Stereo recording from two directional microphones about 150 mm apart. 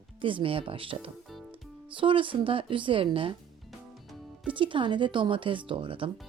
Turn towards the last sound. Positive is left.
turn(degrees=-35)  # may be behind; listen again after turning